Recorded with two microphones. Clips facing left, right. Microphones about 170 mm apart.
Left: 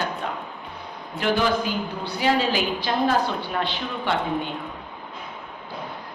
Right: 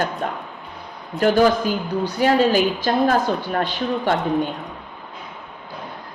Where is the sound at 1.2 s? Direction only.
45° right (ahead or behind).